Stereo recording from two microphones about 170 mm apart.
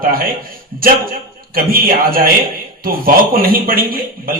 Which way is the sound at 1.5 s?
60° right (ahead or behind).